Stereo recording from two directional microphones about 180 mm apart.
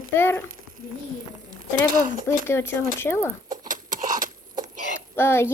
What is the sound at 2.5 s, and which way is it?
Speech, 15° left (ahead or behind).